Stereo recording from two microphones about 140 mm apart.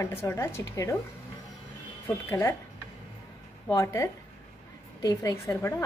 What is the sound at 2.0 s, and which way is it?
Speech, 20° left (ahead or behind).